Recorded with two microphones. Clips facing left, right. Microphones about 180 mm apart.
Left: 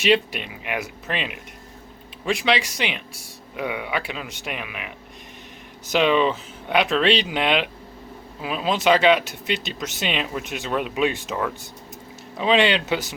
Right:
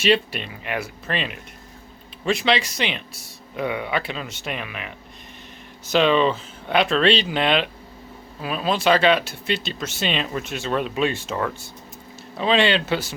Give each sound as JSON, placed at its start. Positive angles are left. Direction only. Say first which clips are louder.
{"t": 0.0, "sound": "speech", "louder": "even", "side_deg": 15}
{"t": 5.9, "sound": "speech", "louder": "right 1 dB", "side_deg": 15}
{"t": 12.4, "sound": "speech", "louder": "even", "side_deg": 15}